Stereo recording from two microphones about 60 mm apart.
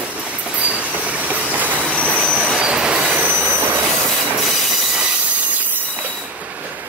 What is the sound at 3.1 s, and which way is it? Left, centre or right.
Train wheels squealing, right.